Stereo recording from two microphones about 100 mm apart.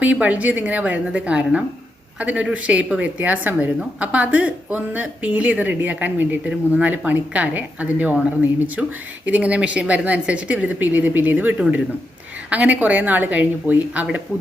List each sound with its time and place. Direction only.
0.0 s speech: 15° right (ahead or behind)